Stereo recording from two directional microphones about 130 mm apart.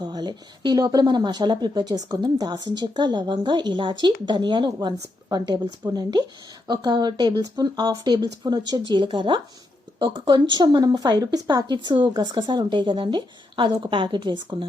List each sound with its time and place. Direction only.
0.0 s speech: 30° right (ahead or behind)